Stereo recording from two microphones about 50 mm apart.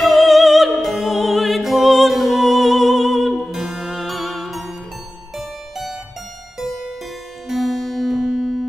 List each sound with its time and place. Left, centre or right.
0.0 s music: centre
6.6 s harpsichord: centre
7.4 s music: centre